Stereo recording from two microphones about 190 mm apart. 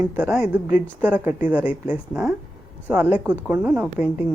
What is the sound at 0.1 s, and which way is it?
A woman's voice, 5° right (ahead or behind).